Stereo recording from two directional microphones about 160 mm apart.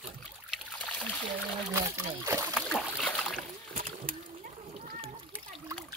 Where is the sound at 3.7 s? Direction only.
60° right (ahead or behind).